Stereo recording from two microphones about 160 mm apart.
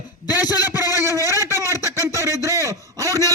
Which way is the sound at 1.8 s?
20° right (ahead or behind).